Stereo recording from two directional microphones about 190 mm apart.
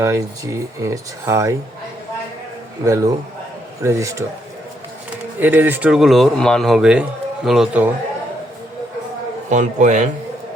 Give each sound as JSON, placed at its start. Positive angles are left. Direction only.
{"t": 0.0, "sound": "speech", "side_deg": -15}
{"t": 2.8, "sound": "speech", "side_deg": -15}
{"t": 5.4, "sound": "speech", "side_deg": -10}
{"t": 9.5, "sound": "a man's voice", "side_deg": -40}